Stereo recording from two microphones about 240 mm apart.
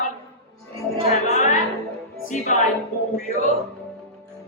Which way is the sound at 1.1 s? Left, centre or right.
Left.